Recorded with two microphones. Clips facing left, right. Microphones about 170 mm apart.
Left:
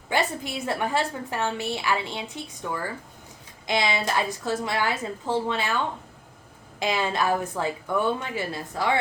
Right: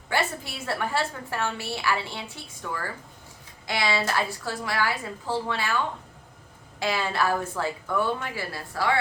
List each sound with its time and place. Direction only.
0.1 s a woman's voice: 20° left (ahead or behind)